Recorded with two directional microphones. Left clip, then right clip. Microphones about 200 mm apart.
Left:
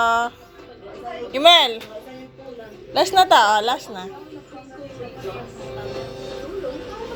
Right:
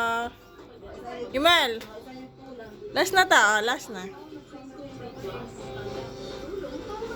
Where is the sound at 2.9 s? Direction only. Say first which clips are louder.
Left 6 dB; 15° right (ahead or behind).